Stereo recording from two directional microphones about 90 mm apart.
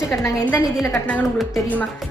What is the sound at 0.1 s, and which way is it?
Speech, 25° left (ahead or behind).